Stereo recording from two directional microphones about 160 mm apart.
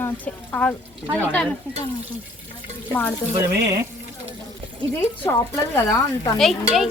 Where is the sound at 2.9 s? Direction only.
10° left (ahead or behind).